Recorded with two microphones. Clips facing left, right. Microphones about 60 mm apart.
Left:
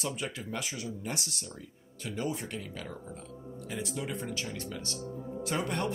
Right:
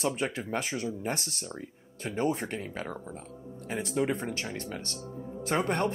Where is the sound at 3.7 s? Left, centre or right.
Right.